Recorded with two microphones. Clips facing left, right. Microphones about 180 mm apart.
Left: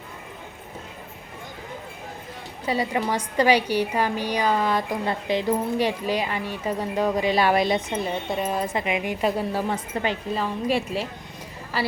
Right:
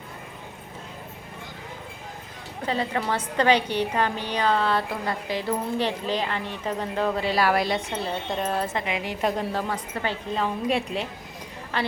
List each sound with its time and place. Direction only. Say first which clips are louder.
2.6 s a woman's voice: left 2 dB; 10° left (ahead or behind)
10.3 s a woman's voice: right 1 dB; centre (ahead or behind)